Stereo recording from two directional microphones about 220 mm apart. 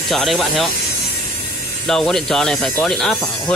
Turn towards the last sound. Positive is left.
turn(degrees=0)  # may be behind; listen again after turning